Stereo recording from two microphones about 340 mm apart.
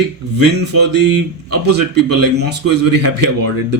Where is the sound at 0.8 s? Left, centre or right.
Right.